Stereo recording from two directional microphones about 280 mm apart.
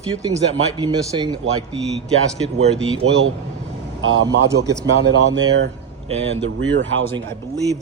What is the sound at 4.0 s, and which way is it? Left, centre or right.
Speech, right.